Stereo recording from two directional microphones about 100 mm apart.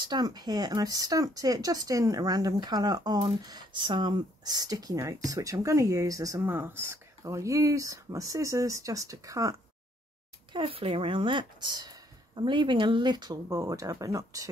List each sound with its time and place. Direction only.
0.0 s speech: 45° right (ahead or behind)
6.4 s speech: 20° right (ahead or behind)
10.5 s speech: 60° right (ahead or behind); by 14.5 s 35° right (ahead or behind)